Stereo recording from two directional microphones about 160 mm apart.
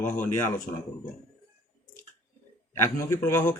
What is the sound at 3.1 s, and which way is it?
Speech, 15° left (ahead or behind).